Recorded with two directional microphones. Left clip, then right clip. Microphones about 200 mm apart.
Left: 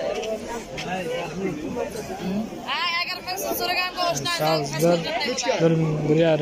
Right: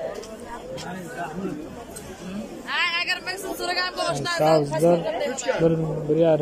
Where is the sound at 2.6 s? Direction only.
55° right (ahead or behind).